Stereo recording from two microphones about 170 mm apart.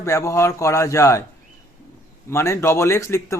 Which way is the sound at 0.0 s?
15° left (ahead or behind).